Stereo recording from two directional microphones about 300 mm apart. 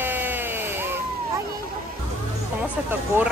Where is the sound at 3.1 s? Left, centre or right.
Centre.